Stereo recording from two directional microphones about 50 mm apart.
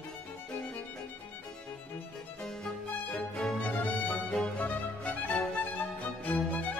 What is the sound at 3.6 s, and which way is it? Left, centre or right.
Music, left.